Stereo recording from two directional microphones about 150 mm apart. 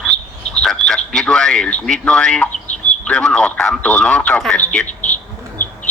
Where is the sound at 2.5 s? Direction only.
50° left (ahead or behind).